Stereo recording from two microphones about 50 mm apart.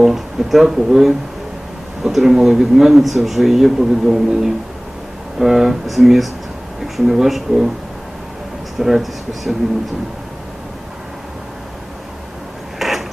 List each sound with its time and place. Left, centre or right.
0.0 s a man's voice: centre
8.8 s a man's voice: centre
12.8 s a sound: centre